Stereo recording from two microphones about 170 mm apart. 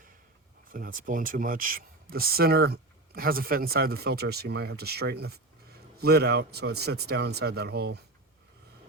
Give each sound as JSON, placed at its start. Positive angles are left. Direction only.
{"t": 0.7, "sound": "speech", "side_deg": -55}